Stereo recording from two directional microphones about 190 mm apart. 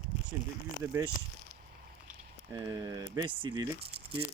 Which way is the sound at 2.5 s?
15° right (ahead or behind).